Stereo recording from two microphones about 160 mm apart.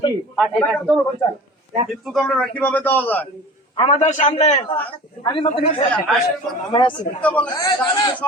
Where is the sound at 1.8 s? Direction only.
Centre (ahead or behind).